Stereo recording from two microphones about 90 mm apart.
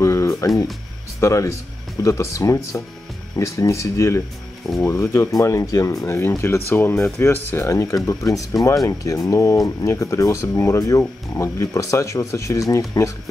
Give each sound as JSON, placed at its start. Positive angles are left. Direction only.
{"t": 0.0, "sound": "music", "side_deg": 35}
{"t": 1.2, "sound": "speech", "side_deg": 35}